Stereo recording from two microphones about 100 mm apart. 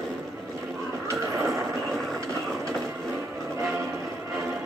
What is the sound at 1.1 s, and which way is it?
Vehicle, 30° right (ahead or behind).